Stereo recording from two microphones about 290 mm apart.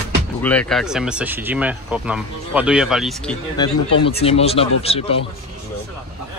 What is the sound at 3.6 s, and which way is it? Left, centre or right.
Speech, centre.